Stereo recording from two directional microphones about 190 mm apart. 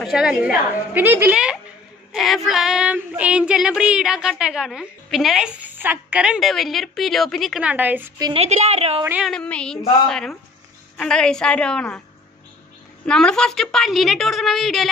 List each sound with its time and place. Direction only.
0.0 s female singing: 5° right (ahead or behind)
8.2 s a woman's voice: 30° right (ahead or behind)
9.0 s a woman's voice: 10° right (ahead or behind)
9.3 s female singing: 5° left (ahead or behind)
13.0 s female singing: 5° left (ahead or behind)